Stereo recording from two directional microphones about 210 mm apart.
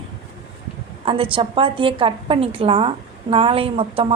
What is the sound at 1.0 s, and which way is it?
A woman's voice, 25° right (ahead or behind).